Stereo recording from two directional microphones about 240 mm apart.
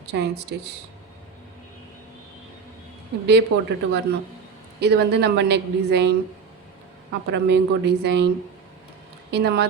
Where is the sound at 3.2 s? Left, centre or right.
Right.